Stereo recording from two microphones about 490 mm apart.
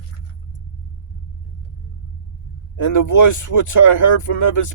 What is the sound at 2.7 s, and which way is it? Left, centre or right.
Speech, left.